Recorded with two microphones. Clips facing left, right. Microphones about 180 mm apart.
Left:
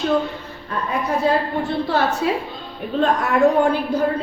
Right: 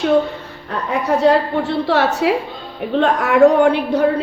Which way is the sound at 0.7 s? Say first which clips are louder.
Right 4 dB; 70° right (ahead or behind).